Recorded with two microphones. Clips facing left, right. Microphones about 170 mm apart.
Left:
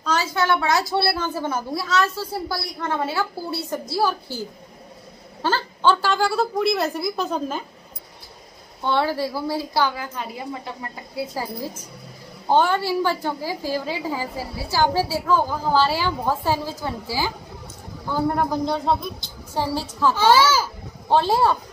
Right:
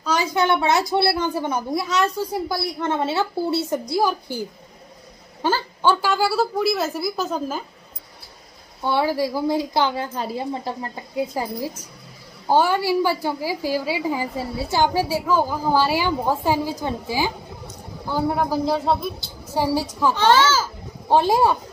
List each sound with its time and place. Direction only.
0.0 s a woman's voice: 15° right (ahead or behind)
8.8 s a woman's voice: 10° right (ahead or behind)
10.1 s a woman's voice: 30° right (ahead or behind)
11.1 s a woman's voice: 15° right (ahead or behind)
20.2 s a child's voice: 10° left (ahead or behind)
21.1 s a woman's voice: 15° right (ahead or behind)